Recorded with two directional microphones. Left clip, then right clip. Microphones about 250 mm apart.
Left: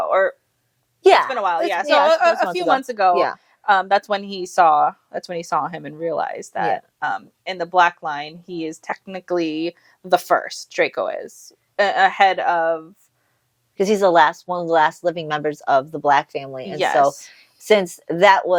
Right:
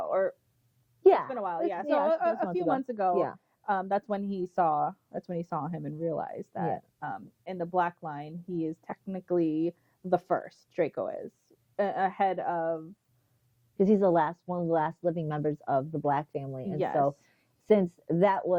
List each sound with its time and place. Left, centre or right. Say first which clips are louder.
0.0 s a woman's voice: left 11 dB; centre
14.4 s speech: left 10 dB; left
14.7 s a woman's voice: left 12 dB; centre